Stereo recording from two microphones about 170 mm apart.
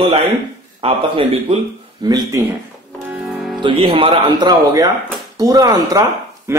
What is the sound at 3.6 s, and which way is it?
A man's voice, 35° right (ahead or behind).